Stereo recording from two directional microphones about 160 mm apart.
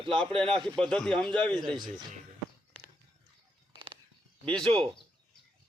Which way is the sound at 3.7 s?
30° right (ahead or behind).